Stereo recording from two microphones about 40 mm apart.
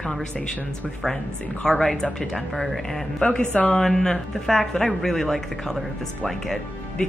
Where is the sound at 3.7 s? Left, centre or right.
Centre.